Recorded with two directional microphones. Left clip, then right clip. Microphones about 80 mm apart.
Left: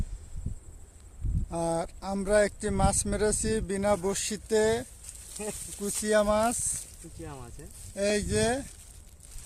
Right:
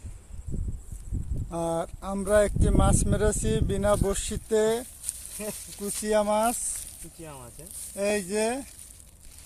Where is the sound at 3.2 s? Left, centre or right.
Centre.